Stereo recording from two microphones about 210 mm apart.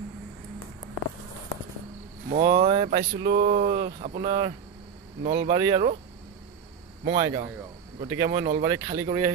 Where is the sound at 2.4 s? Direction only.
25° right (ahead or behind).